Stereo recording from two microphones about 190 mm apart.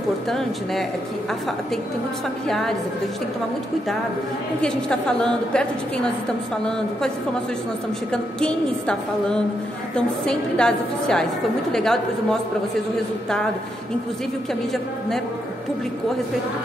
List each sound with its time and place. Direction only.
0.3 s a woman's voice: centre (ahead or behind)
2.4 s a woman's voice: centre (ahead or behind)
4.6 s a woman's voice: 5° left (ahead or behind)
8.1 s a woman's voice: 5° left (ahead or behind)